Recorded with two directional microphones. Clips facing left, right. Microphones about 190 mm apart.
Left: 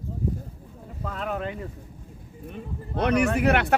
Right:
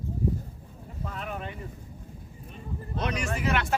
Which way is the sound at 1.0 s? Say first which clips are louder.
Left 6 dB; 80° left.